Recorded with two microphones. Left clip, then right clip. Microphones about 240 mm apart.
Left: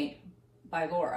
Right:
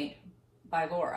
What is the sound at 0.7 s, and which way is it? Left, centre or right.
Speech, centre.